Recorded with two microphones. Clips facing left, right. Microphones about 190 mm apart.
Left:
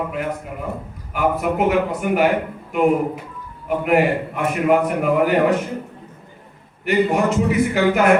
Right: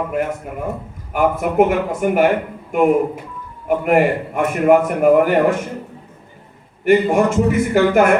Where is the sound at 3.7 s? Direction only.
45° right (ahead or behind).